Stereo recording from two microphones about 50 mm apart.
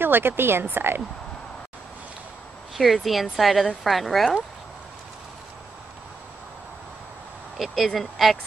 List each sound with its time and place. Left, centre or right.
0.0 s speech: right
2.7 s speech: centre
7.5 s speech: centre